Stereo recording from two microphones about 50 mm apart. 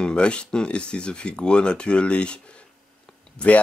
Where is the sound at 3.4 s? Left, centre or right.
Left.